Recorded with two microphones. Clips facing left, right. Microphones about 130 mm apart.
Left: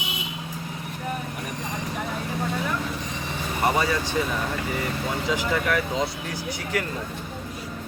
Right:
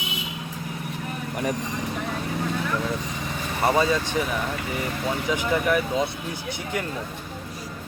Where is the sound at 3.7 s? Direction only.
20° right (ahead or behind).